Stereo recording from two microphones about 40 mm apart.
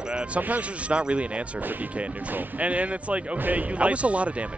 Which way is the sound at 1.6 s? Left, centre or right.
Right.